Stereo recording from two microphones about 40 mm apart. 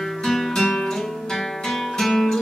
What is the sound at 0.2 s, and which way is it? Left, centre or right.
Music, centre.